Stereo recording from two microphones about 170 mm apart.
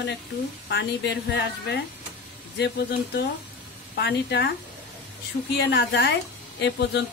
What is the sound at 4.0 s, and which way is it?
Speech, 75° left (ahead or behind).